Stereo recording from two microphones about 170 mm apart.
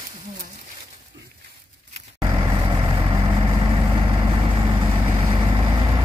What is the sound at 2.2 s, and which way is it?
Vehicle, 25° right (ahead or behind).